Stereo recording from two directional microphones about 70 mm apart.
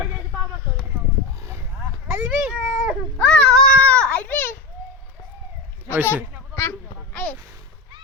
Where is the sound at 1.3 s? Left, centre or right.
Right.